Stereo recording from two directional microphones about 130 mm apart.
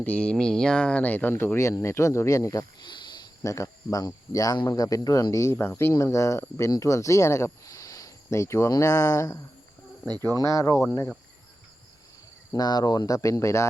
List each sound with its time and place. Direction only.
0.0 s speech: 10° left (ahead or behind); by 3.2 s 35° left (ahead or behind)
3.4 s speech: 25° left (ahead or behind)
12.5 s speech: 30° left (ahead or behind)